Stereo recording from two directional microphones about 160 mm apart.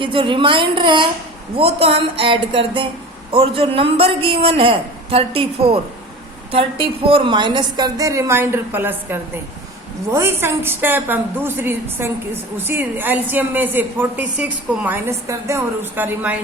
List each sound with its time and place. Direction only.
0.0 s a man's voice: 30° right (ahead or behind); by 16.4 s 10° right (ahead or behind)